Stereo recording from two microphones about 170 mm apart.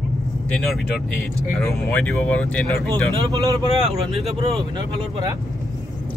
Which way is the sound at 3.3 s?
20° right (ahead or behind).